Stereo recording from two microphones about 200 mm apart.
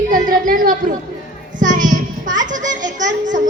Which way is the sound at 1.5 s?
40° right (ahead or behind).